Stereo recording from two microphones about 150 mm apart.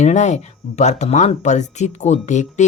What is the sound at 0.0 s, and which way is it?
Speech, 50° left (ahead or behind).